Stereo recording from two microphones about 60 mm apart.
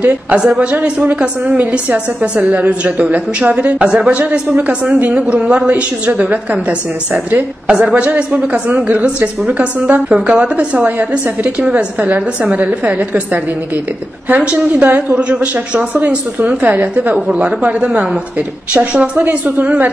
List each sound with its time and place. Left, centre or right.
0.0 s a woman's voice: centre
14.4 s a woman's voice: right